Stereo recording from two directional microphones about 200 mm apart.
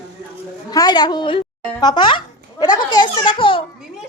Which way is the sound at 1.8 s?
25° left (ahead or behind).